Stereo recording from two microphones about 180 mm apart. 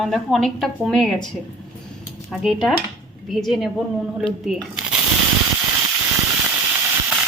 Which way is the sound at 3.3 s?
Centre (ahead or behind).